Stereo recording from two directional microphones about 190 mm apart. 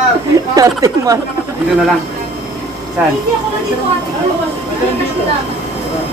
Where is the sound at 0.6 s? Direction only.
15° right (ahead or behind).